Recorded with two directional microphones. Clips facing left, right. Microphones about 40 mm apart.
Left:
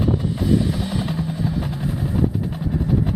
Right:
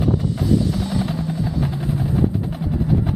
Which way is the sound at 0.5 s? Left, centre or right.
Centre.